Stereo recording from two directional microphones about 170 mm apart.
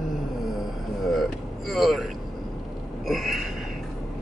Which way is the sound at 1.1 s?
Centre (ahead or behind).